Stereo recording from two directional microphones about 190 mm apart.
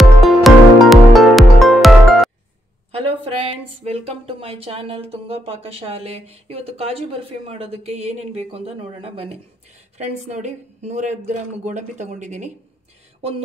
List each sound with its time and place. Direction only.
0.2 s music: centre (ahead or behind)
2.9 s speech: 30° right (ahead or behind)